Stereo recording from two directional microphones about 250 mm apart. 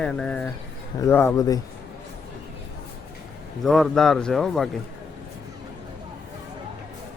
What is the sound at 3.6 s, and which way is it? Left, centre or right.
Speech, centre.